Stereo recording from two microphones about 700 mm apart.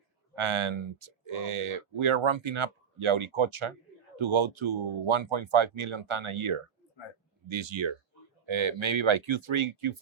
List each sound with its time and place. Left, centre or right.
0.3 s speech: right